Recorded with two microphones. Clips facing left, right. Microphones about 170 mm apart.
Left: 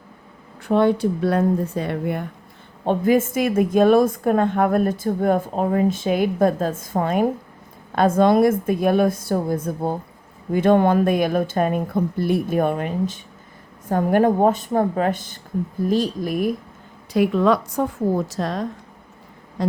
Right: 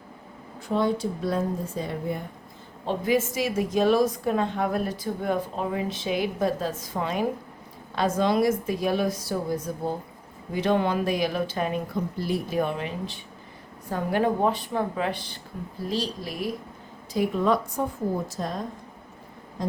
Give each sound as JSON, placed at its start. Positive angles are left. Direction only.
{"t": 0.7, "sound": "speech", "side_deg": 65}
{"t": 2.8, "sound": "a woman's voice", "side_deg": 55}
{"t": 17.2, "sound": "a woman's voice", "side_deg": 80}
{"t": 19.6, "sound": "a sound", "side_deg": 90}